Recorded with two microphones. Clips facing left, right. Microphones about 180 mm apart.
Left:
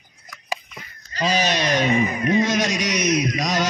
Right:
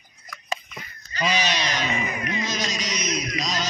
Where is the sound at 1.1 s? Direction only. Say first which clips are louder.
Left 4 dB; 40° left (ahead or behind).